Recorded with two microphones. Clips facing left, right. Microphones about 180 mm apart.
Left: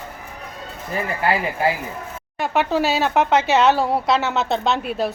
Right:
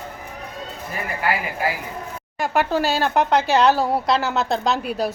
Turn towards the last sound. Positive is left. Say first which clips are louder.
# left 1 dB
turn(degrees=0)  # may be behind; listen again after turning